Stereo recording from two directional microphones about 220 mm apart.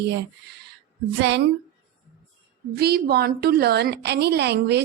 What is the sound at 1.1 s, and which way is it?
Speech, 50° right (ahead or behind).